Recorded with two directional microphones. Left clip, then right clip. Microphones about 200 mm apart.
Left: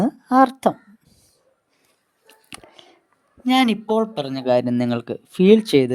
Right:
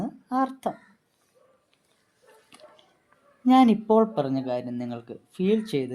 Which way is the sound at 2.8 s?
45° left (ahead or behind).